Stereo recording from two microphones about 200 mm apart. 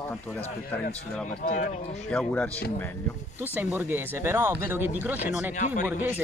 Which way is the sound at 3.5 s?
10° right (ahead or behind).